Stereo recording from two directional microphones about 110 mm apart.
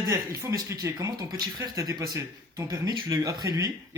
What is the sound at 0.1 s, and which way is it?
Speech, 30° right (ahead or behind).